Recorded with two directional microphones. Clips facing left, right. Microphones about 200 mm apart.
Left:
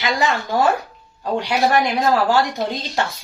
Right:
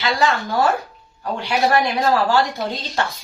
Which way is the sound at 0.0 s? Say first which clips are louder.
Right 1 dB; 20° left (ahead or behind).